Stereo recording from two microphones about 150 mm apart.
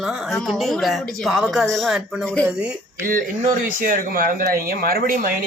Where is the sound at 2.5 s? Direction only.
5° right (ahead or behind).